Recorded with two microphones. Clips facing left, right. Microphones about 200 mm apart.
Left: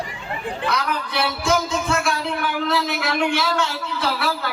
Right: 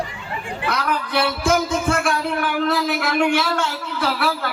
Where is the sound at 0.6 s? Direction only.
50° right (ahead or behind).